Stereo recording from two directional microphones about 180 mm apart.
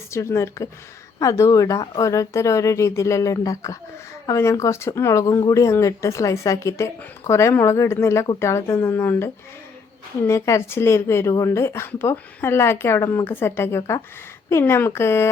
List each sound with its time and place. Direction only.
0.1 s speech: 15° left (ahead or behind)